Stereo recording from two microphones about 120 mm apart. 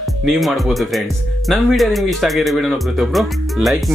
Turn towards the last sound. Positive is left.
turn(degrees=0)  # may be behind; listen again after turning